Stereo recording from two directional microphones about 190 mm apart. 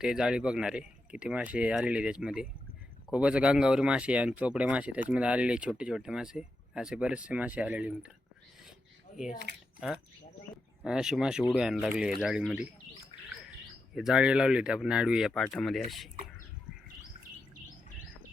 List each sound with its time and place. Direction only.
0.0 s speech: 5° right (ahead or behind)
9.5 s speech: 60° right (ahead or behind)
10.8 s speech: 5° right (ahead or behind)
13.9 s speech: centre (ahead or behind)